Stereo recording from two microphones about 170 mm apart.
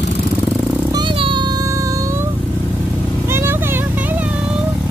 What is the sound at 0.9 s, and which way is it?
Vehicle, 30° right (ahead or behind).